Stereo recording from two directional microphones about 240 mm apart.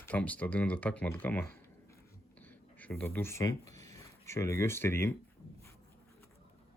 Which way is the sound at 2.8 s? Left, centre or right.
Centre.